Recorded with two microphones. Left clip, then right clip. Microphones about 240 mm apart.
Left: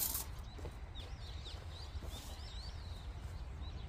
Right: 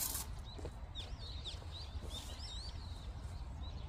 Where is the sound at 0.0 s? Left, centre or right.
Centre.